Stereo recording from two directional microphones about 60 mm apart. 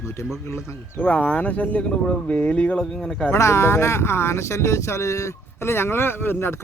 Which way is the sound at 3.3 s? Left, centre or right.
Left.